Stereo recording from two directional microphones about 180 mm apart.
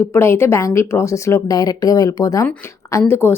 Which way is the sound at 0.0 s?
15° left (ahead or behind).